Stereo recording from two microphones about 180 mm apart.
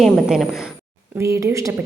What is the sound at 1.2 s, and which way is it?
Speech, 15° right (ahead or behind).